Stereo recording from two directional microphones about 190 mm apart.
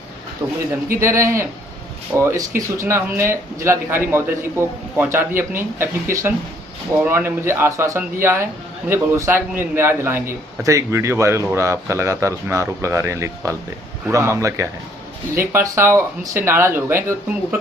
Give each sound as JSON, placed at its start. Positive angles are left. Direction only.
{"t": 0.4, "sound": "a man's voice", "side_deg": -10}